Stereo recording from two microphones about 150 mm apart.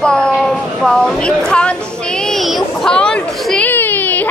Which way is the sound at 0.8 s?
5° left (ahead or behind).